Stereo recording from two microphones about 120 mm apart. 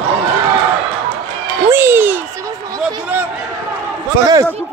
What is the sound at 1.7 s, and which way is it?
Speech, 20° right (ahead or behind).